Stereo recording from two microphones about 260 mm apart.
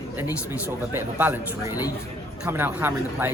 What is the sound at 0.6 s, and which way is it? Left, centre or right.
Speech, centre.